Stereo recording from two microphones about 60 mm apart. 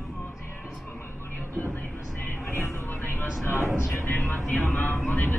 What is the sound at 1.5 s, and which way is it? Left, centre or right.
Train, left.